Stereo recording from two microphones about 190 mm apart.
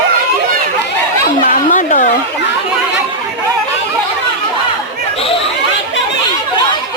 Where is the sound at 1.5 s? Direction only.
40° left (ahead or behind).